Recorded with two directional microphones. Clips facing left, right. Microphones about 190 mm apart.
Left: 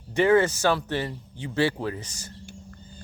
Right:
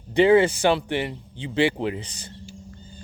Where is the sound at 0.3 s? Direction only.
25° right (ahead or behind).